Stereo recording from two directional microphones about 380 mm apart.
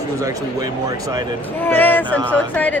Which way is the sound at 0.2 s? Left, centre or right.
Centre.